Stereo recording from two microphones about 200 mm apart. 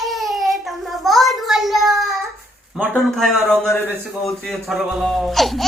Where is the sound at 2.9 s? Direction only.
Centre (ahead or behind).